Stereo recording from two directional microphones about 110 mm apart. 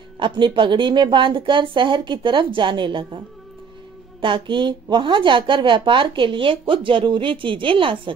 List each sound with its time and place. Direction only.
0.2 s a woman's voice: 45° right (ahead or behind)
4.2 s a woman's voice: 45° right (ahead or behind)